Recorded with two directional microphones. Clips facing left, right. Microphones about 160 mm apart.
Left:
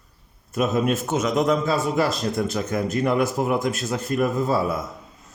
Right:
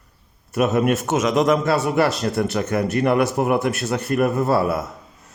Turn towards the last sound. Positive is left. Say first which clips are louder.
# right 3 dB
turn(degrees=-70)  # may be behind; listen again after turning